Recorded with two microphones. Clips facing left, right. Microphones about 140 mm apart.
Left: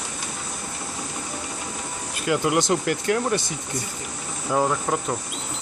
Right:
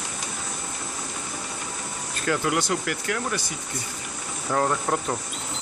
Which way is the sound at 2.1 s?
15° left (ahead or behind).